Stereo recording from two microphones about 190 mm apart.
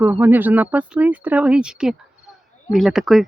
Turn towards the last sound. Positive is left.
turn(degrees=0)  # may be behind; listen again after turning